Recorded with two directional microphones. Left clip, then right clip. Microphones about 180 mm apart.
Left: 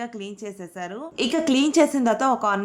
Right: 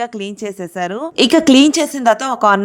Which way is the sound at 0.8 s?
50° right (ahead or behind).